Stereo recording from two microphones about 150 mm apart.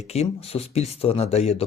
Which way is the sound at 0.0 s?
45° left (ahead or behind).